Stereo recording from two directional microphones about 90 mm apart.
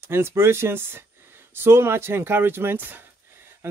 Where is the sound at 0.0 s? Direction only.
25° right (ahead or behind).